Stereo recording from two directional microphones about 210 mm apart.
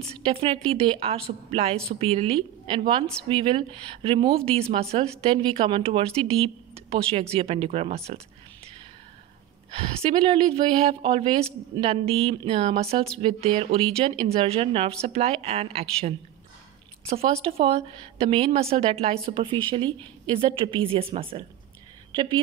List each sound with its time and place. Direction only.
0.0 s speech: 25° right (ahead or behind)
9.8 s speech: 25° right (ahead or behind)